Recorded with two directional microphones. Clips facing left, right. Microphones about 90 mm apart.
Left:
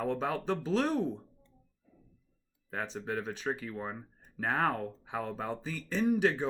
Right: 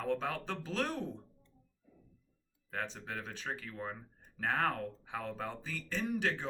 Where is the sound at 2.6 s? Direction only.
15° left (ahead or behind).